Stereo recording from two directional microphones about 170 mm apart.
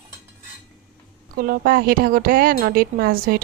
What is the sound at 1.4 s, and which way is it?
A woman's voice, 60° right (ahead or behind).